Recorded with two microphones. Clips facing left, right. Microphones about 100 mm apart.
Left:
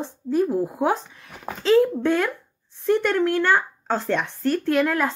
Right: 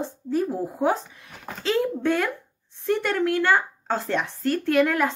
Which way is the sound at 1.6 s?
35° left (ahead or behind).